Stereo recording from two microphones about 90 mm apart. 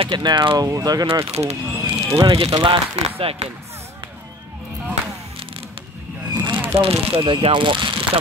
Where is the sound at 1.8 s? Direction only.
35° right (ahead or behind).